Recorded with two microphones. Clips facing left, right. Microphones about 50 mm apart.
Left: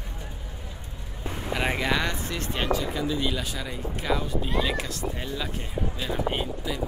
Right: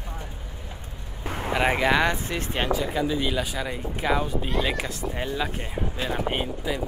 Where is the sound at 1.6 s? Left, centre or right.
Centre.